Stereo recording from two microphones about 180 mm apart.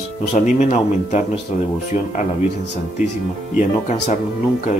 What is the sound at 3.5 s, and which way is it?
Speech, 45° left (ahead or behind).